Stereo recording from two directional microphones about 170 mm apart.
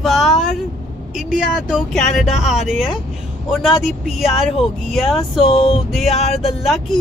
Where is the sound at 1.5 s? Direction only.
Centre (ahead or behind).